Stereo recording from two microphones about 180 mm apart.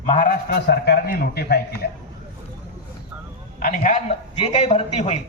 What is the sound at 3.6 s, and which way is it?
Speech, 50° left (ahead or behind).